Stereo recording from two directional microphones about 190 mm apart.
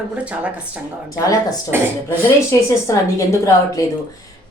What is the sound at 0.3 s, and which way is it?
Speech, 5° right (ahead or behind).